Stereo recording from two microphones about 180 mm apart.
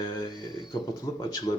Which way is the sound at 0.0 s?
20° left (ahead or behind).